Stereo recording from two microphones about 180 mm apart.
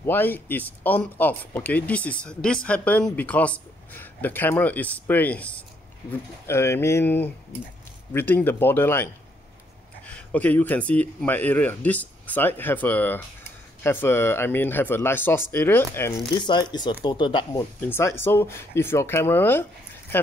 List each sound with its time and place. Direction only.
0.0 s speech: 10° left (ahead or behind)
16.2 s speech: 25° left (ahead or behind)
17.8 s speech: 15° left (ahead or behind)